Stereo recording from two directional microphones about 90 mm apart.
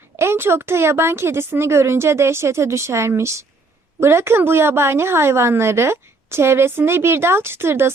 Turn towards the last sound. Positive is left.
turn(degrees=-30)  # may be behind; listen again after turning